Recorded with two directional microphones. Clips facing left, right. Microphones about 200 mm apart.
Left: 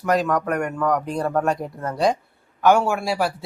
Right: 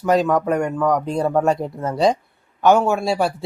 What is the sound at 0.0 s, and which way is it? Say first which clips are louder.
Speech: right 4 dB; 25° right (ahead or behind).